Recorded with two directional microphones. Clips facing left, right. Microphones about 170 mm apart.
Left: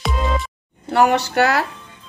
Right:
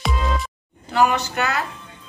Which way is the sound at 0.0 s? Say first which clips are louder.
Left 2 dB; centre (ahead or behind).